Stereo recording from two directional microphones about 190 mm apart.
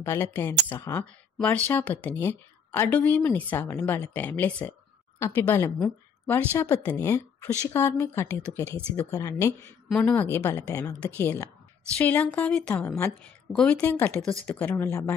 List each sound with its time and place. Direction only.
0.0 s a woman's voice: 10° left (ahead or behind)